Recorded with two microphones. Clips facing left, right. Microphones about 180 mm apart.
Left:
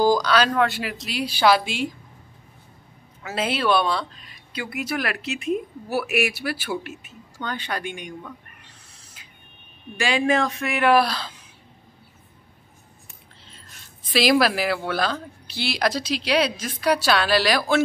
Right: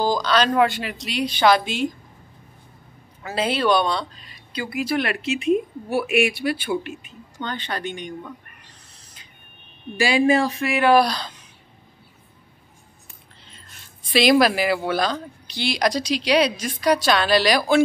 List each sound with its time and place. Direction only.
0.0 s speech: 10° left (ahead or behind)
3.3 s speech: 5° left (ahead or behind)
6.5 s speech: 5° left (ahead or behind)
8.9 s a sound: 5° left (ahead or behind)
9.9 s a man's voice: 35° right (ahead or behind)
10.6 s speech: centre (ahead or behind)
14.1 s speech: centre (ahead or behind)